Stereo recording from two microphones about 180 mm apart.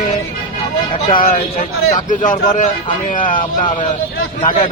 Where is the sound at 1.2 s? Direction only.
50° left (ahead or behind).